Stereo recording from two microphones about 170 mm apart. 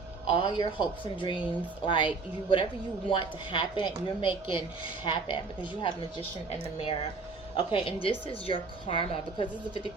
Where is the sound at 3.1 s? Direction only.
30° left (ahead or behind).